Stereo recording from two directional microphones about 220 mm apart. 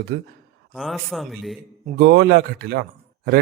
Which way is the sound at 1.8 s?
50° right (ahead or behind).